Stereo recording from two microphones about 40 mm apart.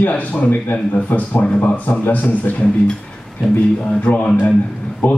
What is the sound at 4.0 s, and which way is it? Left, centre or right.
A man's voice, left.